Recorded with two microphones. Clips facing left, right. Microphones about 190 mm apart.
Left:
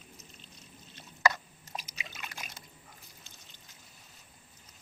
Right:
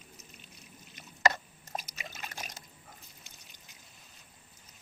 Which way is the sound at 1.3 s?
45° right (ahead or behind).